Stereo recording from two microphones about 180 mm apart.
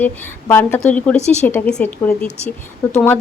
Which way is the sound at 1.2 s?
40° left (ahead or behind).